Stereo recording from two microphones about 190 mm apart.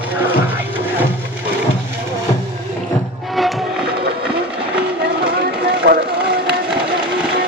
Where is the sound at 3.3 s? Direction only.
Centre (ahead or behind).